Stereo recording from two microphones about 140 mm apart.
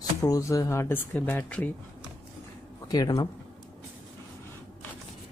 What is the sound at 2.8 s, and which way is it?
Speech, 25° left (ahead or behind).